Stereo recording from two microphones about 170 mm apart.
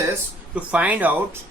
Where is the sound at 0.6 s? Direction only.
5° right (ahead or behind).